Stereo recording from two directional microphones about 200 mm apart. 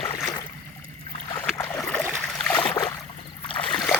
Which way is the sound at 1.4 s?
5° left (ahead or behind).